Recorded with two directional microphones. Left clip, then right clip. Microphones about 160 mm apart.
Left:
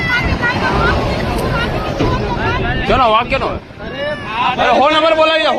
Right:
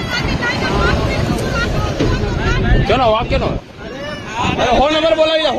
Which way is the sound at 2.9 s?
75° right (ahead or behind).